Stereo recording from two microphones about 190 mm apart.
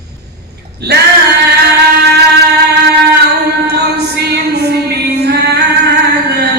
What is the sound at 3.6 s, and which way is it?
Music, 60° right (ahead or behind).